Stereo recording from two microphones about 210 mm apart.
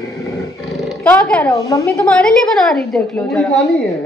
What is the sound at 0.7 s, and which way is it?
Speech, centre (ahead or behind).